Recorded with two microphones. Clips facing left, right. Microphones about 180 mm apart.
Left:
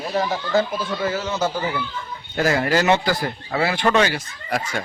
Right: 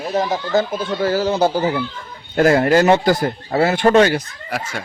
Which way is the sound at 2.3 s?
55° right (ahead or behind).